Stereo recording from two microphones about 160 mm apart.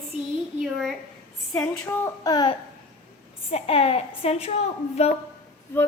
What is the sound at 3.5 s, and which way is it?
Child singing, 40° left (ahead or behind).